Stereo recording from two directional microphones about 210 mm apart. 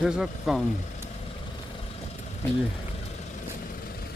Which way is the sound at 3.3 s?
45° left (ahead or behind).